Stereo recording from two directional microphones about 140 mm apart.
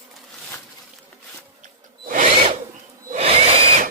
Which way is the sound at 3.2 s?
50° right (ahead or behind).